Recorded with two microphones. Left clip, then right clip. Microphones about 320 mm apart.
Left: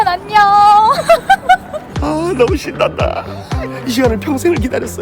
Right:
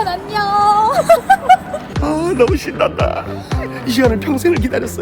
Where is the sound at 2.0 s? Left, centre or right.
Centre.